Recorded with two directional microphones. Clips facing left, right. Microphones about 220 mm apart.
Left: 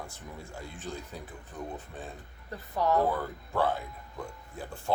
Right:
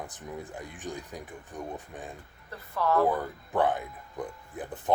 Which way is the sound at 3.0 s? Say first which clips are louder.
Right 3 dB; 15° right (ahead or behind).